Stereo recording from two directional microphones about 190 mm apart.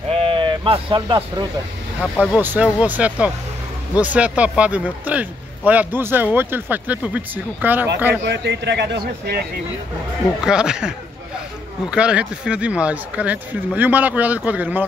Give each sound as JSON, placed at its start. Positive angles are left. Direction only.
{"t": 0.1, "sound": "a sound", "side_deg": -30}
{"t": 2.0, "sound": "speech", "side_deg": -5}
{"t": 8.2, "sound": "speech", "side_deg": -65}
{"t": 10.4, "sound": "speech", "side_deg": -5}